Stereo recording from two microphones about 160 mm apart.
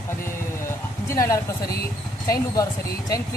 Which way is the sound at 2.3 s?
20° left (ahead or behind).